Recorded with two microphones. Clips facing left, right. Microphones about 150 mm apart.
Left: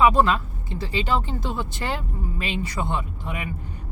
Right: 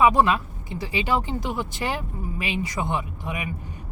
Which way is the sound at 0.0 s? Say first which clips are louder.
Even; 15° right (ahead or behind).